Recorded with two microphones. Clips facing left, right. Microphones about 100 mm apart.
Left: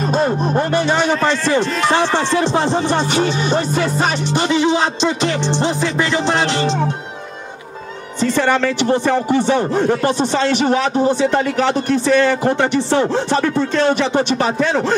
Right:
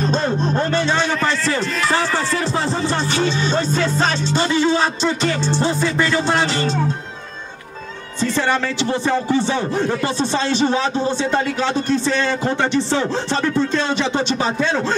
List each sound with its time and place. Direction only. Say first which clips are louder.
0.0 s speech: left 3 dB; 10° left (ahead or behind)
8.2 s speech: left 4 dB; 15° left (ahead or behind)